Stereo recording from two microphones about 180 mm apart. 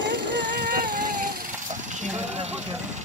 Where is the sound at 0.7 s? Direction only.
50° right (ahead or behind).